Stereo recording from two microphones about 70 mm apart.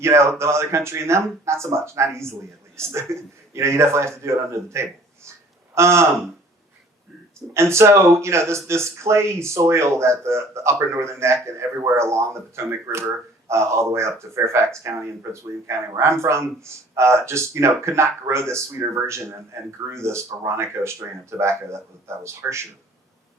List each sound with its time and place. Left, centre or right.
0.0 s speech: right
7.5 s speech: right